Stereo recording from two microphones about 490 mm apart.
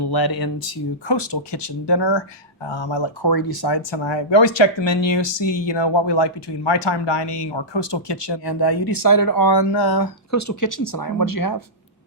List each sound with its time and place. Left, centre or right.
0.0 s speech: left
10.3 s speech: left